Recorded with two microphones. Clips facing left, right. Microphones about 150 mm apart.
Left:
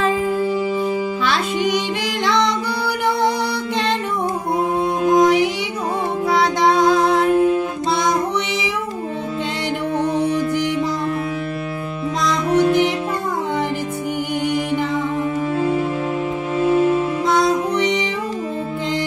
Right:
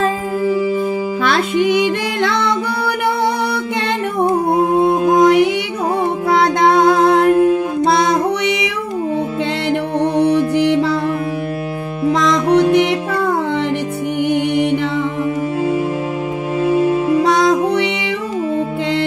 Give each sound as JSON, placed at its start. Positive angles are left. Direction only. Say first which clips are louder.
{"t": 1.2, "sound": "music", "louder": "right 7 dB", "side_deg": -55}
{"t": 4.7, "sound": "music", "louder": "right 2 dB", "side_deg": -55}
{"t": 9.9, "sound": "music", "louder": "right 5 dB", "side_deg": -65}
{"t": 12.2, "sound": "music", "louder": "right 3 dB", "side_deg": -70}
{"t": 17.2, "sound": "music", "louder": "right 4 dB", "side_deg": -70}